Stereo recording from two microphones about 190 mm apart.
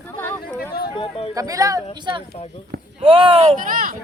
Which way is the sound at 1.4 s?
20° right (ahead or behind).